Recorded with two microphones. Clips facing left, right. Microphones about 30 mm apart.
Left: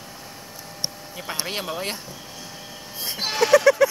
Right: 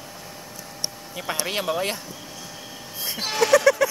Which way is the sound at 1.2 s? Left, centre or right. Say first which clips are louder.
Right 3 dB; right.